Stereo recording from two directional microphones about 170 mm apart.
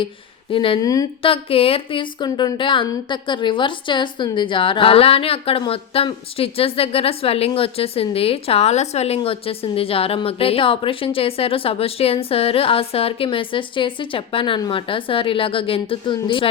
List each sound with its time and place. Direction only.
0.5 s speech: 30° left (ahead or behind)